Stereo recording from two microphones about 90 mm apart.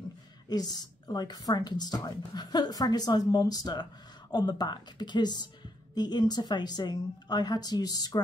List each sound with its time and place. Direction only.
0.5 s a woman's voice: 50° left (ahead or behind)